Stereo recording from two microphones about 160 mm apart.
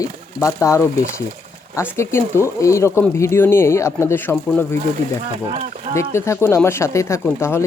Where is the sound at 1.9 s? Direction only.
15° left (ahead or behind).